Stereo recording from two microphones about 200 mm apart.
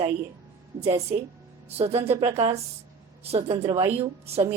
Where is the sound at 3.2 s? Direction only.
30° right (ahead or behind).